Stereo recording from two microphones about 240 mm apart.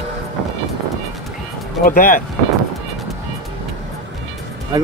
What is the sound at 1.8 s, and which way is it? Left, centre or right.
Speech, left.